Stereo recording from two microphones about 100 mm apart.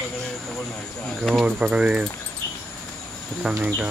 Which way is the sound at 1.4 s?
10° right (ahead or behind).